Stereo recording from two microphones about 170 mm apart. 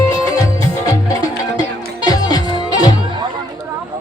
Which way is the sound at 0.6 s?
20° left (ahead or behind).